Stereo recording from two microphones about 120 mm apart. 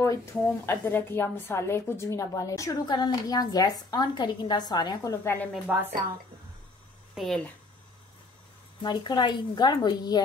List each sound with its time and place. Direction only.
0.0 s a woman's voice: 25° left (ahead or behind)
5.2 s a woman's voice: 20° left (ahead or behind)
5.7 s speech: 10° right (ahead or behind)
7.2 s speech: centre (ahead or behind)
8.8 s a woman's voice: 40° left (ahead or behind)